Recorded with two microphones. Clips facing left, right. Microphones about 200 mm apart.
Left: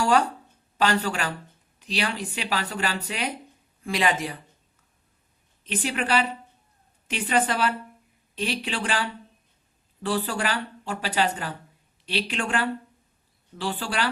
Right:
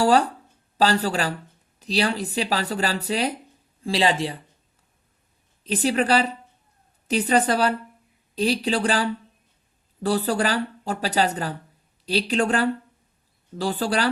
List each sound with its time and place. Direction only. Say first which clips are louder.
0.0 s speech: right 3 dB; 35° right (ahead or behind)
5.6 s speech: right 6 dB; 35° right (ahead or behind)